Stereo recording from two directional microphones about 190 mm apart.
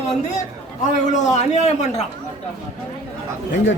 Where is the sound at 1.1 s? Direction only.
40° left (ahead or behind).